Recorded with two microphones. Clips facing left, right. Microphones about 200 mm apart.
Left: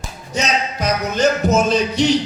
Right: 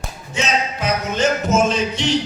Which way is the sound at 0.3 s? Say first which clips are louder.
Left 1 dB; 40° left (ahead or behind).